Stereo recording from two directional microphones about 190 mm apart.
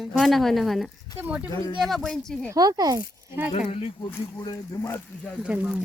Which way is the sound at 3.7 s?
30° left (ahead or behind).